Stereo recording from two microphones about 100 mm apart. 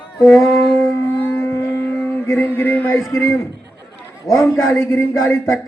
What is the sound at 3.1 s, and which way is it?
A man's voice, 30° left (ahead or behind).